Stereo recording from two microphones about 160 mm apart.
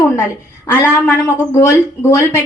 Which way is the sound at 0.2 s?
20° left (ahead or behind).